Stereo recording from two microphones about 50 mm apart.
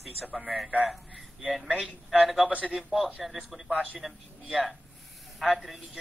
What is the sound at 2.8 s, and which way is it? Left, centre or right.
Speech, centre.